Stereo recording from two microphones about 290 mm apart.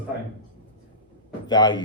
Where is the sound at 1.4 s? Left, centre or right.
Centre.